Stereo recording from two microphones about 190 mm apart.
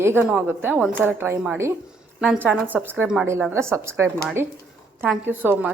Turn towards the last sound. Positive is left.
turn(degrees=-10)  # may be behind; listen again after turning